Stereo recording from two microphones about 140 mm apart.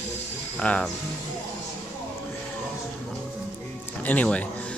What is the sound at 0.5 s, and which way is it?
Speech, 10° left (ahead or behind).